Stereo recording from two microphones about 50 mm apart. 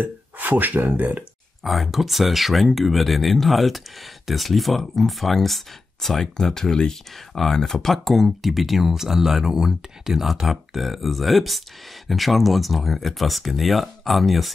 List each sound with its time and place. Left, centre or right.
0.0 s speech: right
1.6 s speech: centre